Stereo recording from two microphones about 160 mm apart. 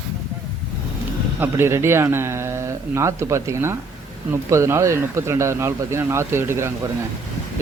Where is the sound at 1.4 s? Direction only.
15° right (ahead or behind).